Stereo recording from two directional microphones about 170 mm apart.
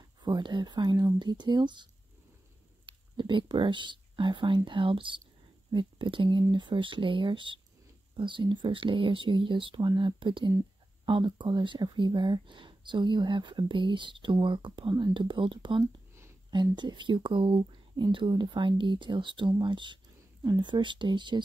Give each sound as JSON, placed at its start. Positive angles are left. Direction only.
{"t": 0.2, "sound": "speech", "side_deg": -25}
{"t": 2.9, "sound": "speech", "side_deg": -30}
{"t": 15.8, "sound": "a sound", "side_deg": -15}
{"t": 16.5, "sound": "speech", "side_deg": -25}